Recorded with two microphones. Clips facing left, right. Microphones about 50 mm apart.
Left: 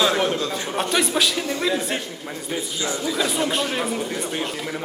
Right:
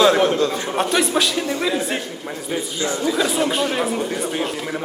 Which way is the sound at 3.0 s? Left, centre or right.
Centre.